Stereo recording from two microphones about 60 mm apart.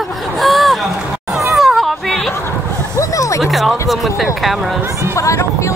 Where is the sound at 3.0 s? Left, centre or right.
Left.